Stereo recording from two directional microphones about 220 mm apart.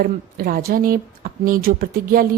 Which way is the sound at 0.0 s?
40° right (ahead or behind).